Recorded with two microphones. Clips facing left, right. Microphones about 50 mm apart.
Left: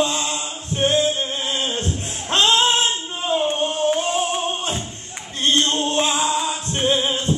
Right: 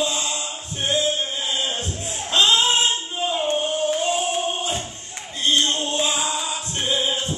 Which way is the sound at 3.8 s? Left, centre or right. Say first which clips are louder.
Left 5 dB; left.